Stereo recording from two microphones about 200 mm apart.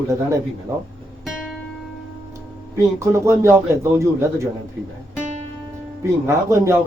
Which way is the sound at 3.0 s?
15° right (ahead or behind).